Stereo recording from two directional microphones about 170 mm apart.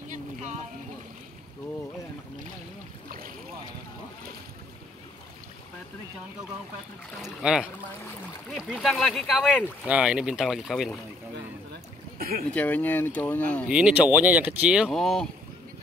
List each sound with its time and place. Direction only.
0.1 s a sound: 45° right (ahead or behind)
3.1 s boat: 55° right (ahead or behind)
7.2 s speech: 5° right (ahead or behind)
12.2 s speech: 60° right (ahead or behind)
12.4 s speech: 10° left (ahead or behind)
13.7 s speech: 5° right (ahead or behind)